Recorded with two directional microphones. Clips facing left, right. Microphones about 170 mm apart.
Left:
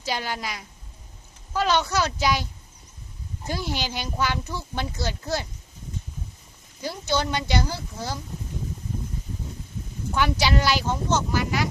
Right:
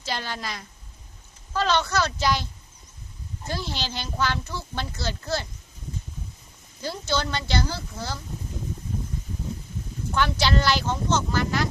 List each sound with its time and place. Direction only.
0.0 s speech: 10° left (ahead or behind)
6.8 s speech: 15° left (ahead or behind)
10.2 s speech: 10° left (ahead or behind)